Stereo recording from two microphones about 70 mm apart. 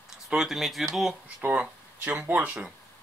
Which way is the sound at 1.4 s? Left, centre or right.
Right.